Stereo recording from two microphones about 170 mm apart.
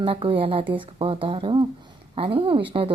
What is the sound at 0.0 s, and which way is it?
A woman's voice, 30° right (ahead or behind).